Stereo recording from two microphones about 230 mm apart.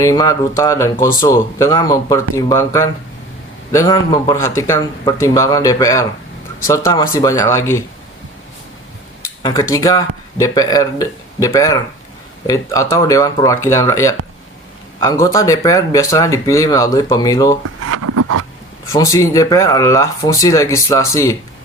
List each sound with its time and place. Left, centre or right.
0.0 s speech: centre
9.4 s speech: centre
17.8 s a sound: right
18.9 s speech: centre